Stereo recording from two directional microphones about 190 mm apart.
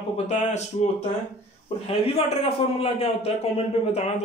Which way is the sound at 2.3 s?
30° left (ahead or behind).